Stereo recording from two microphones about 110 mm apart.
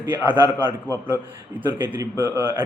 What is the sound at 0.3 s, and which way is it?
A man's voice, 20° right (ahead or behind).